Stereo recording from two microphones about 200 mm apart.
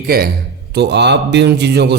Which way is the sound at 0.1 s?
50° right (ahead or behind).